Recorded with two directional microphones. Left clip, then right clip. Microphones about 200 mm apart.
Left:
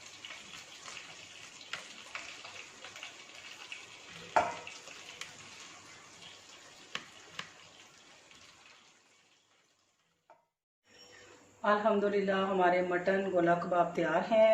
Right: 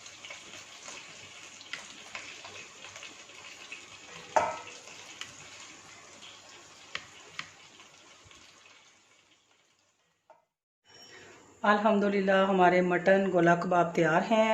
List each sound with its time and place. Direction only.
11.6 s a man's voice: 55° right (ahead or behind)